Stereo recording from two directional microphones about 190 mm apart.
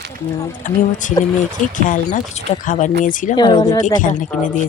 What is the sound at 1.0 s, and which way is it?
Speech, 40° left (ahead or behind).